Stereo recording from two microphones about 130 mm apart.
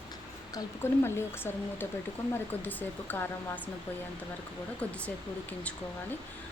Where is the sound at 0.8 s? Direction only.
20° left (ahead or behind).